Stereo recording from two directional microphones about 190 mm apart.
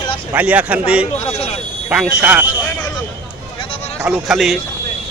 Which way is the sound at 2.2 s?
5° right (ahead or behind).